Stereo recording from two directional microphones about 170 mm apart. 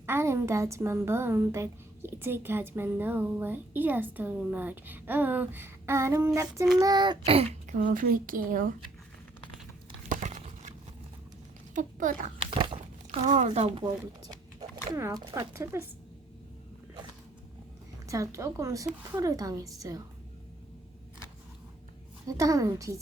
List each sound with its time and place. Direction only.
0.0 s a woman's voice: 15° right (ahead or behind); by 7.8 s 35° right (ahead or behind)
7.8 s a woman's voice: 50° right (ahead or behind)
10.1 s crumpling: 45° right (ahead or behind)
11.7 s speech: 50° right (ahead or behind)
12.5 s a sound: 30° right (ahead or behind)
14.9 s a woman's voice: 15° right (ahead or behind)
18.1 s a woman's voice: 20° right (ahead or behind)
22.3 s a child's voice: 20° right (ahead or behind)